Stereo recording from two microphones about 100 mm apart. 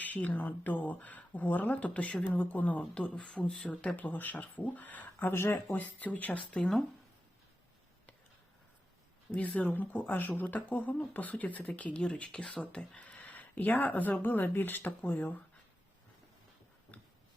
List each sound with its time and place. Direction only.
0.0 s speech: 15° left (ahead or behind)
9.3 s speech: 15° left (ahead or behind)
16.9 s a sound: 15° left (ahead or behind)